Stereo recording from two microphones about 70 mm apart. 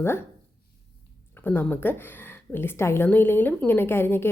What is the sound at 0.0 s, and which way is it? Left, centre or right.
Speech, left.